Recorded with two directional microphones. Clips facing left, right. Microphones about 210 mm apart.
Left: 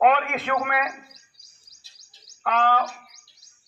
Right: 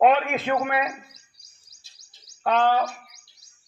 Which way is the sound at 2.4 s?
35° right (ahead or behind).